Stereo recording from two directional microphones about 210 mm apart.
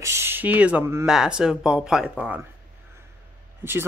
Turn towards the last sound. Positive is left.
turn(degrees=-10)  # may be behind; listen again after turning